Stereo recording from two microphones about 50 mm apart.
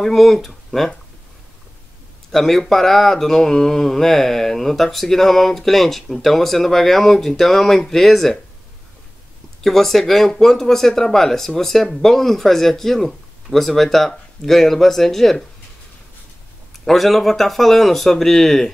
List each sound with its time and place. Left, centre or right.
0.0 s mantra: centre
2.3 s mantra: centre
9.6 s mantra: centre
16.8 s mantra: centre